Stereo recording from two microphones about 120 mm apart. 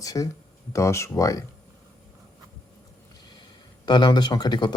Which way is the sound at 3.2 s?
40° left (ahead or behind).